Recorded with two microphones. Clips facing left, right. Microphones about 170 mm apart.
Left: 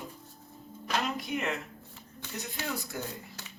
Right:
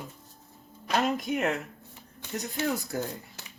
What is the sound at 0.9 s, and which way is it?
Speech, 45° right (ahead or behind).